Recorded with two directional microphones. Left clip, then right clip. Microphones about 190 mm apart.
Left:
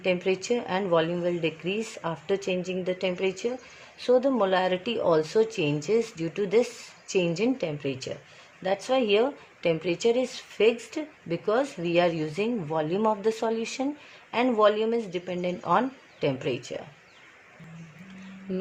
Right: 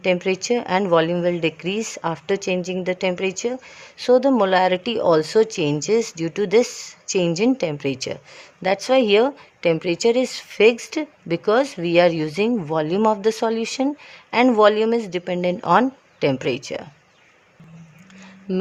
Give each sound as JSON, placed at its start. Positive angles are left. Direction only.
{"t": 0.0, "sound": "speech", "side_deg": -25}
{"t": 18.5, "sound": "speech", "side_deg": -45}